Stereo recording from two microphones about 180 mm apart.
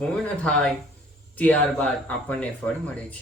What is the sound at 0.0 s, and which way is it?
Speech, 5° left (ahead or behind).